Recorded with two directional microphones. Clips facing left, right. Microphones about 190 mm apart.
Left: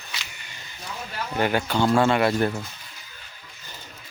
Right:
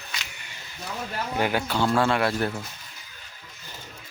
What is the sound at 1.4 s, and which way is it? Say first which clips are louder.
Speech: left 3 dB; 5° right (ahead or behind).